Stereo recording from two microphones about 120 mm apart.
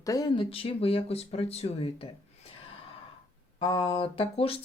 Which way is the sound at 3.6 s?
45° left (ahead or behind).